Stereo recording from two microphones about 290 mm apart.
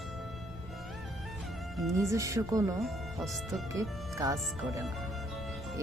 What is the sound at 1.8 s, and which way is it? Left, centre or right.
Speech, centre.